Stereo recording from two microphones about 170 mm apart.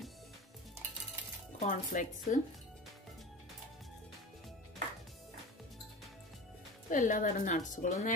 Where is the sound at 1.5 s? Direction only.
45° left (ahead or behind).